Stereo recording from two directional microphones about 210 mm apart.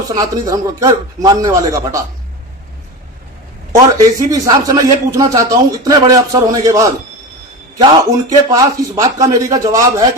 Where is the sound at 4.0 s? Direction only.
15° right (ahead or behind).